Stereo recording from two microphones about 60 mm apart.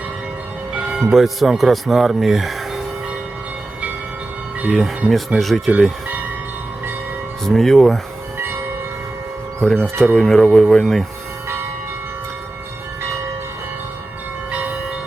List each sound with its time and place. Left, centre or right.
0.9 s speech: centre
5.0 s speech: centre
5.4 s speech: centre
7.4 s speech: centre
9.6 s speech: centre
14.5 s train: right